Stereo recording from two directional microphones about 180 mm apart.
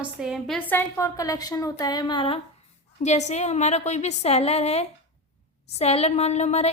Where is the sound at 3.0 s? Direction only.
40° left (ahead or behind).